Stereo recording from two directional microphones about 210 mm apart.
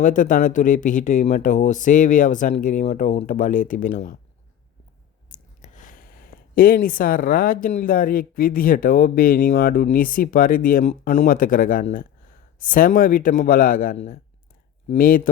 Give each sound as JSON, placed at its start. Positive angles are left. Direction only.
{"t": 0.0, "sound": "speech", "side_deg": 40}
{"t": 5.3, "sound": "speech", "side_deg": 40}